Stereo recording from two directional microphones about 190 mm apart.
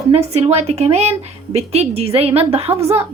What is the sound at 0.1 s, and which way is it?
A woman's voice, 35° right (ahead or behind).